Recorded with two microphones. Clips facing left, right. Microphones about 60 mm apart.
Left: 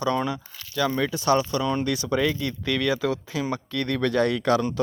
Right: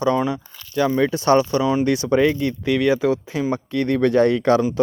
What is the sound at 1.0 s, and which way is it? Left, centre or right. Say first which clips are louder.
Speech: right 6 dB; right.